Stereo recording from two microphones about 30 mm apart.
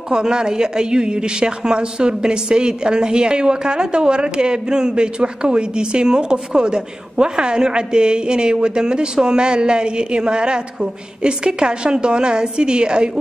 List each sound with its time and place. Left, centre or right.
0.1 s a woman's voice: right